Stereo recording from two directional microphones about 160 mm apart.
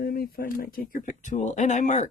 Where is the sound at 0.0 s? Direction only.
65° left (ahead or behind).